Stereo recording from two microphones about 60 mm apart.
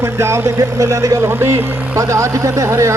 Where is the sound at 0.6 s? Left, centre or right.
Right.